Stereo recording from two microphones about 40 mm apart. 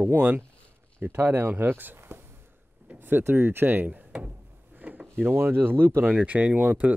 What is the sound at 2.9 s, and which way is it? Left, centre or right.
Speech, right.